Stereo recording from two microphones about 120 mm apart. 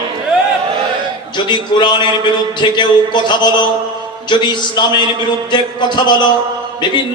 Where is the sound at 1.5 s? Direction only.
40° left (ahead or behind).